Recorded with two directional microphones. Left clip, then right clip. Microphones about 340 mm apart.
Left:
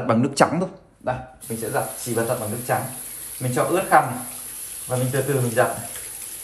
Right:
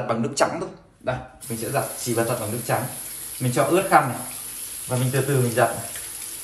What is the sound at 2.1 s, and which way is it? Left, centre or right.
Speech, centre.